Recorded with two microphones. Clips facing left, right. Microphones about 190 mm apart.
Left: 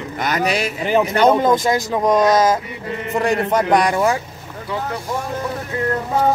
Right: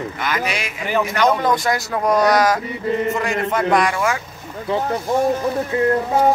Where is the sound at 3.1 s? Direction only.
35° left (ahead or behind).